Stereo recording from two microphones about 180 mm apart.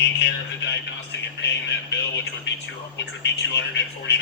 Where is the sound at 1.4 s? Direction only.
75° left (ahead or behind).